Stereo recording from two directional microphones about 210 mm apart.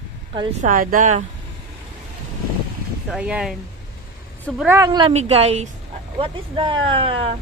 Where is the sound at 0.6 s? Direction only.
40° right (ahead or behind).